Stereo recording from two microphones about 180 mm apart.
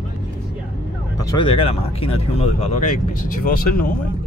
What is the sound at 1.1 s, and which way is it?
Speech, 20° left (ahead or behind).